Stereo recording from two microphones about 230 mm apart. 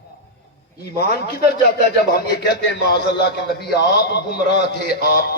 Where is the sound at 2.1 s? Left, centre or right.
Left.